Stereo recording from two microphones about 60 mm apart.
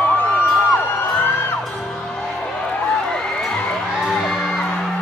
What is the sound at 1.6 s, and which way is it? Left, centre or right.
Music, centre.